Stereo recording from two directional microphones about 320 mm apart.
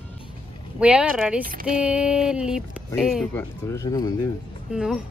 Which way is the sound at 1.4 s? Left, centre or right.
Right.